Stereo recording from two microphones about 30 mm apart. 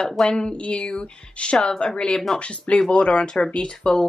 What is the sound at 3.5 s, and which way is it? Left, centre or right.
Speech, left.